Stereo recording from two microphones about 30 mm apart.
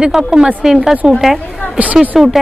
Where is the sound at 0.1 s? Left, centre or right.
Centre.